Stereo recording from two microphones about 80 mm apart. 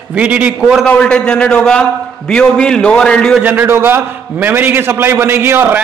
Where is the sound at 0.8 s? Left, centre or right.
Centre.